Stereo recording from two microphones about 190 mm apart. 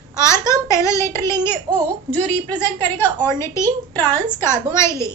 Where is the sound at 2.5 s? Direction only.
25° right (ahead or behind).